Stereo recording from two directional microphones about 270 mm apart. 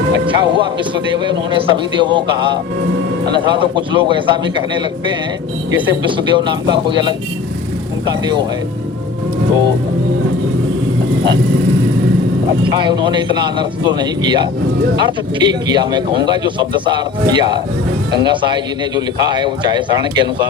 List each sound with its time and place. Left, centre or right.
0.3 s a man's voice: centre
12.6 s a man's voice: centre